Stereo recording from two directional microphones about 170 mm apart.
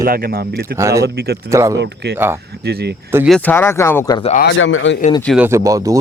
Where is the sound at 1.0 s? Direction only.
75° right (ahead or behind).